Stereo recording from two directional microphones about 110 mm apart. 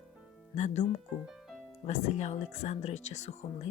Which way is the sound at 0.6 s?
90° left.